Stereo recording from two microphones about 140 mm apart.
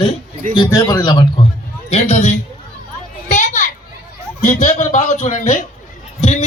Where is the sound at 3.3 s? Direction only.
65° left (ahead or behind).